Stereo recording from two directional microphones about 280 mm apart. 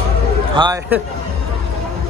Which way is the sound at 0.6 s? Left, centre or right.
Centre.